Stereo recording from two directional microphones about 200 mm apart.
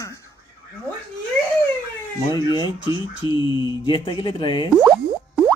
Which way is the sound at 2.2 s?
25° left (ahead or behind).